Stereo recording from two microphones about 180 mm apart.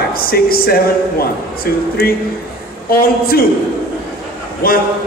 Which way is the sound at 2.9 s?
55° left (ahead or behind).